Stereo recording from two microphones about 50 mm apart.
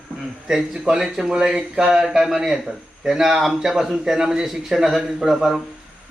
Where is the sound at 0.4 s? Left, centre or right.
Centre.